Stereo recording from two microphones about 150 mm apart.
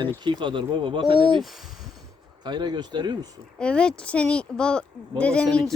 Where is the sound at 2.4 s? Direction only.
30° right (ahead or behind).